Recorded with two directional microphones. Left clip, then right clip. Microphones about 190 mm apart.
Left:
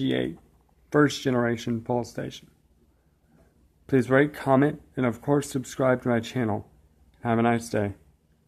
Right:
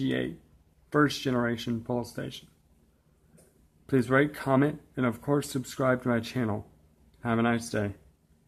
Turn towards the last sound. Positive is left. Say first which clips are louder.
# left 4 dB
turn(degrees=15)  # may be behind; listen again after turning